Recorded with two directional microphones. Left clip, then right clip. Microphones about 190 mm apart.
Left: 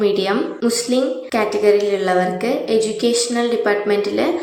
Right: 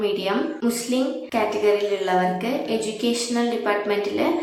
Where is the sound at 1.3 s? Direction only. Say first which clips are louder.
Left 5 dB; 20° left (ahead or behind).